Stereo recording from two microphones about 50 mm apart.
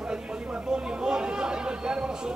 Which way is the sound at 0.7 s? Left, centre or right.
Centre.